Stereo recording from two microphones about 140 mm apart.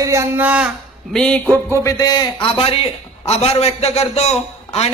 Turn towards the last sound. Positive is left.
turn(degrees=45)  # may be behind; listen again after turning